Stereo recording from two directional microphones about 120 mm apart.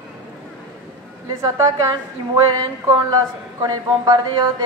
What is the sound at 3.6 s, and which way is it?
A man's voice, 35° right (ahead or behind).